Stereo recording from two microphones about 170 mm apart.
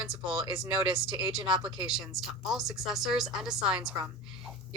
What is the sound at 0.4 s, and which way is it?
A woman's voice, 25° right (ahead or behind).